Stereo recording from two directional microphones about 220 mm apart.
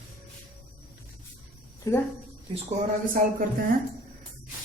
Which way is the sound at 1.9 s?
15° left (ahead or behind).